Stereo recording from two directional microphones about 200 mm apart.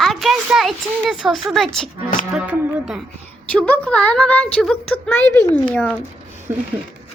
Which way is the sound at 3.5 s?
5° left (ahead or behind).